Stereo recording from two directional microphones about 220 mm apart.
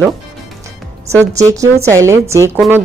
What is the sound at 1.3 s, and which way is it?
A woman's voice, 15° right (ahead or behind).